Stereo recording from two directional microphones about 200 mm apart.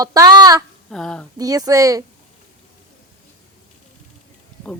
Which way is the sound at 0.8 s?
5° left (ahead or behind).